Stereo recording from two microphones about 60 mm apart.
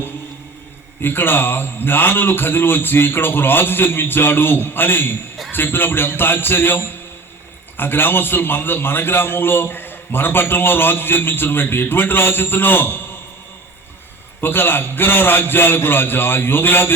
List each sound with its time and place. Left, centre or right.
1.0 s a man's voice: left
14.4 s a man's voice: left